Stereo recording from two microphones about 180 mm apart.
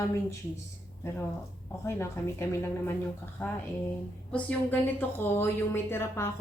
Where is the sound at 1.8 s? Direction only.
15° left (ahead or behind).